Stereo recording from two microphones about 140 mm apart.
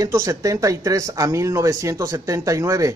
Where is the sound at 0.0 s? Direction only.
20° right (ahead or behind).